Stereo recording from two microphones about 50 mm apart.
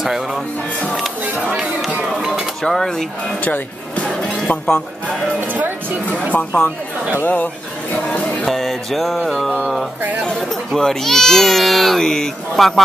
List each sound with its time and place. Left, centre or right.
0.0 s speech: centre
2.0 s music: centre
2.6 s speech: centre
3.9 s music: left
5.4 s speech: right
6.3 s speech: left
7.9 s a sound: left
8.5 s music: centre
10.3 s speech: centre